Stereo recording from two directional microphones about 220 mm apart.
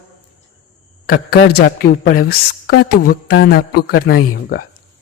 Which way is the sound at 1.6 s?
45° left (ahead or behind).